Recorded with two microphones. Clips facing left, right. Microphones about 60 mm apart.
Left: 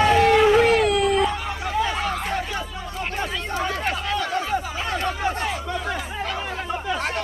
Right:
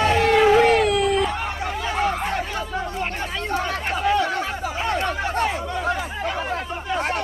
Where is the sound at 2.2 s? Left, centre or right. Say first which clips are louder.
Right 1 dB; centre.